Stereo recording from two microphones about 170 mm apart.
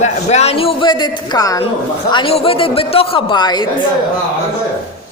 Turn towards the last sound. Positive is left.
turn(degrees=25)  # may be behind; listen again after turning